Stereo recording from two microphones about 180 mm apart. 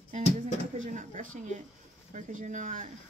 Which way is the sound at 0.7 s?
45° right (ahead or behind).